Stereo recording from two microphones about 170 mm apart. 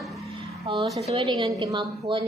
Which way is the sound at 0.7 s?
30° right (ahead or behind).